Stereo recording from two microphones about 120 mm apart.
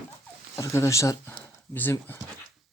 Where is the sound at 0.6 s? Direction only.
25° left (ahead or behind).